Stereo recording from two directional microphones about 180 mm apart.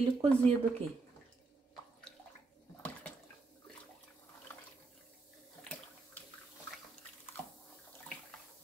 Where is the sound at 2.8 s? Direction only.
10° left (ahead or behind).